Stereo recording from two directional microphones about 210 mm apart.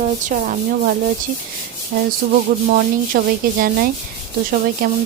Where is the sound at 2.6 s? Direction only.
40° right (ahead or behind).